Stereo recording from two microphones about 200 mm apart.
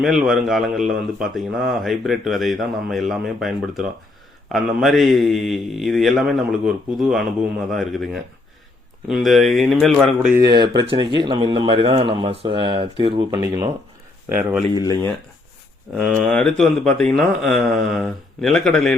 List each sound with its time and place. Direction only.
0.0 s a man's voice: centre (ahead or behind)
10.3 s speech: 20° right (ahead or behind)
14.3 s a man's voice: 5° right (ahead or behind)
14.8 s speech: 20° left (ahead or behind)
16.0 s a man's voice: 5° left (ahead or behind)